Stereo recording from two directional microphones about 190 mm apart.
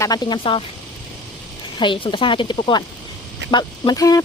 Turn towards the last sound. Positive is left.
turn(degrees=20)  # may be behind; listen again after turning